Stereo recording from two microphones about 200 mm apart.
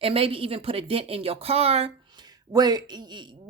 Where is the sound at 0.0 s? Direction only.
25° right (ahead or behind).